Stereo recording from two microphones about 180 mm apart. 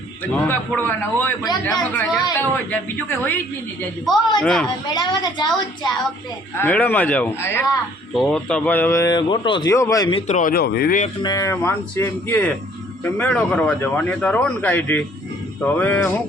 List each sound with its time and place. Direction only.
0.3 s speech: 10° left (ahead or behind)
4.9 s a woman's voice: 25° left (ahead or behind)
6.6 s speech: 10° left (ahead or behind)
10.2 s speech: 40° left (ahead or behind)
11.2 s speech: 20° left (ahead or behind)